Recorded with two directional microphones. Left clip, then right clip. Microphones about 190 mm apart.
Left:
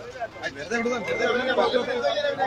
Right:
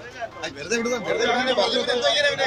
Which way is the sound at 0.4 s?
50° right (ahead or behind).